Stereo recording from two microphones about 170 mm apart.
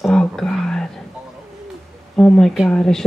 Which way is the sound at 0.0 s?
5° left (ahead or behind).